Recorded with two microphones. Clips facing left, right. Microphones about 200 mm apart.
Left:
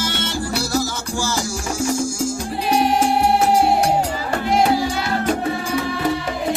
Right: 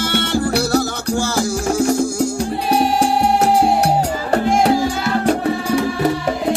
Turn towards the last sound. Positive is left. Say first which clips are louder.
# right 3 dB
turn(degrees=-45)  # may be behind; listen again after turning